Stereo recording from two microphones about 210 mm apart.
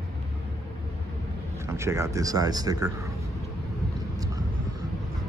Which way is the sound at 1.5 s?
15° right (ahead or behind).